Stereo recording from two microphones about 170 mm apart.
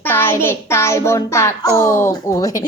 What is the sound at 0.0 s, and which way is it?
A child's voice, 15° left (ahead or behind).